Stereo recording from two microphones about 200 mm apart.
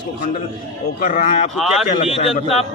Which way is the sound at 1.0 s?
45° left (ahead or behind).